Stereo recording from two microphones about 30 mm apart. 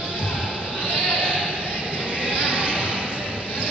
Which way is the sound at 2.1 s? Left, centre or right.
Right.